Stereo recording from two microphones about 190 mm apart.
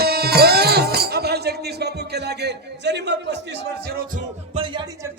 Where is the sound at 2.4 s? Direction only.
65° right (ahead or behind).